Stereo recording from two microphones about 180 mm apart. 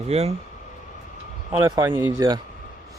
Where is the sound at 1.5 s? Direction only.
15° right (ahead or behind).